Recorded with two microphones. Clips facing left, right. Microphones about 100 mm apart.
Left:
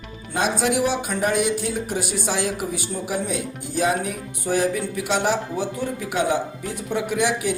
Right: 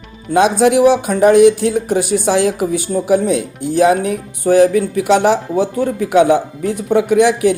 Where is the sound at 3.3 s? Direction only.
65° right (ahead or behind).